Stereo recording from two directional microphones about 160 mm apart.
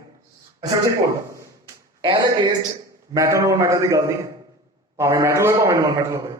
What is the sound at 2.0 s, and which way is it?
A man's voice, 30° right (ahead or behind).